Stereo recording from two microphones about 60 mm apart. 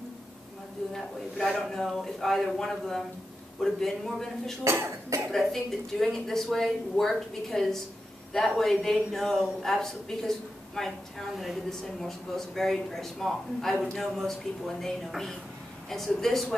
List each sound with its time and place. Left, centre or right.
0.9 s a man's voice: centre
4.6 s speech: right
5.3 s a man's voice: centre